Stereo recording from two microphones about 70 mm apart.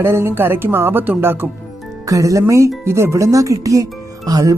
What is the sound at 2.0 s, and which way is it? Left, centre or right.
Speech, right.